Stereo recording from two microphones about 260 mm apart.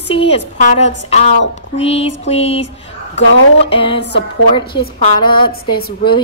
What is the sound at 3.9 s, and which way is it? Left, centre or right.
Music, left.